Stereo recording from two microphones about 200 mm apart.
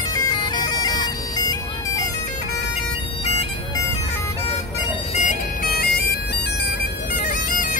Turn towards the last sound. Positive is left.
turn(degrees=45)  # may be behind; listen again after turning